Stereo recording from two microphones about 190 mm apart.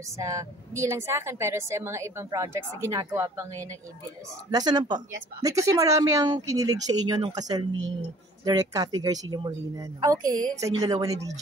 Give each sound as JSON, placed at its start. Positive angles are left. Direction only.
{"t": 0.2, "sound": "a woman's voice", "side_deg": -15}